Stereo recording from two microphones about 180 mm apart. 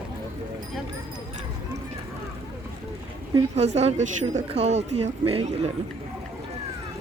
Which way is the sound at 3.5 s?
35° right (ahead or behind).